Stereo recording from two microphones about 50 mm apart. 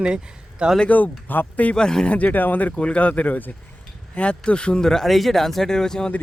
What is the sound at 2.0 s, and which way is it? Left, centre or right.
Speech, left.